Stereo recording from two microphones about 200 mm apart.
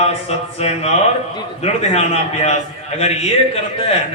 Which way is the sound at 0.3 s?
30° left (ahead or behind).